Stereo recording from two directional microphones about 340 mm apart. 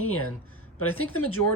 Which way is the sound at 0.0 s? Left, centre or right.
Left.